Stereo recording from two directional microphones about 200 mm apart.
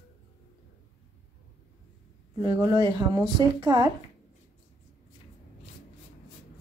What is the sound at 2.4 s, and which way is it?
A woman's voice, 20° right (ahead or behind).